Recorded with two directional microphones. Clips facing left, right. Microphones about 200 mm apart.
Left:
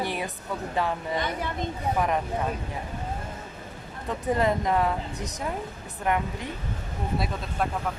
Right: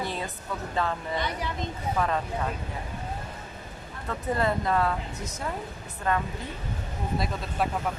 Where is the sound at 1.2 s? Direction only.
50° left (ahead or behind).